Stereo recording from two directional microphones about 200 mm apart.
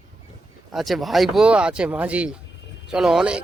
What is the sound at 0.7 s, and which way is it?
Speech, centre (ahead or behind).